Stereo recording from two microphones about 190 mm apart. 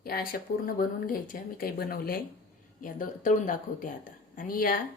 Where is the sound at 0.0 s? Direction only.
50° left (ahead or behind).